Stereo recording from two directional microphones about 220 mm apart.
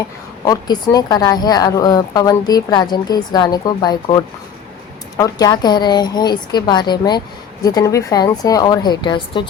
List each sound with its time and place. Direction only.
0.4 s a woman's voice: 15° left (ahead or behind)